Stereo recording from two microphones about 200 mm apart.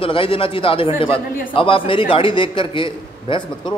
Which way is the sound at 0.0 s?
25° left (ahead or behind).